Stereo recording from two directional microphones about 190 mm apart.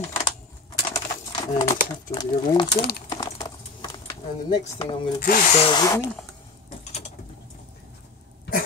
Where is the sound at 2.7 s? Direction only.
55° left (ahead or behind).